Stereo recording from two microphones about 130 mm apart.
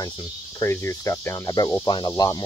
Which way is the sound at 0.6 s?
20° left (ahead or behind).